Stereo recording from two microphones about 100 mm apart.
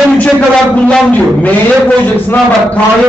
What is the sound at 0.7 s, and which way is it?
A man's voice, 15° left (ahead or behind).